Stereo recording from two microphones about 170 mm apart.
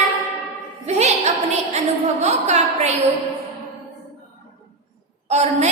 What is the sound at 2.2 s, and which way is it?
Speech, 40° right (ahead or behind).